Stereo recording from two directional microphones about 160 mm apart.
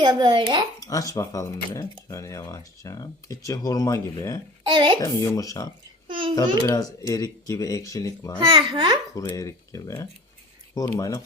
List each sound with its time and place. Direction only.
0.0 s speech: 25° right (ahead or behind)
0.8 s speech: 20° left (ahead or behind)
4.7 s speech: 30° right (ahead or behind)
4.9 s speech: 20° left (ahead or behind)
8.4 s speech: 30° right (ahead or behind)
9.1 s speech: 20° left (ahead or behind)